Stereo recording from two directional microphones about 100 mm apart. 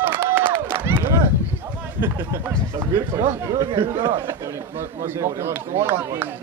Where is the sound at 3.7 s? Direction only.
60° right (ahead or behind).